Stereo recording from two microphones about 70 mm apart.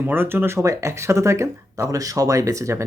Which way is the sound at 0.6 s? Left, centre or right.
Right.